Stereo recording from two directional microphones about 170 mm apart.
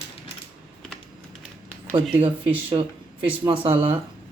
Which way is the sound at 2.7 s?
30° right (ahead or behind).